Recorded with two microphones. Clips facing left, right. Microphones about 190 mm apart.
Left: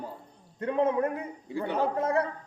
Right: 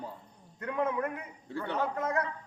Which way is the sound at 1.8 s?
30° left (ahead or behind).